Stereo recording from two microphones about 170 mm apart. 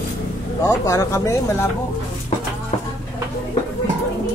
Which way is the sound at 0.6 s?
20° left (ahead or behind).